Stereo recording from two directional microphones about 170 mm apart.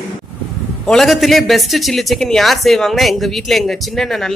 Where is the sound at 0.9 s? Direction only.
Centre (ahead or behind).